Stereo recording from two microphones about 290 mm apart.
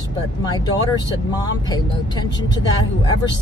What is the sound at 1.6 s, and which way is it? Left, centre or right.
Speech, centre.